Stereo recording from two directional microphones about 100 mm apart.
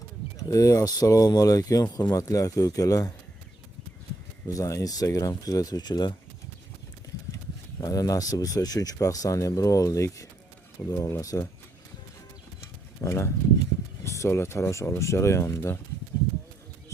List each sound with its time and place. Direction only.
0.3 s speech: 35° left (ahead or behind)
4.4 s speech: 35° left (ahead or behind)
7.8 s speech: 35° left (ahead or behind)
13.0 s speech: 25° left (ahead or behind)